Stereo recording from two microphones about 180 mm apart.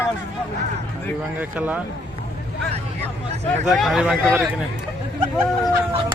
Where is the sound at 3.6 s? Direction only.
Centre (ahead or behind).